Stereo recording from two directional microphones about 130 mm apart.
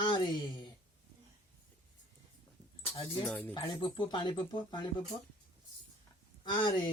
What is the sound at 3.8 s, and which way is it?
Speech, 40° left (ahead or behind).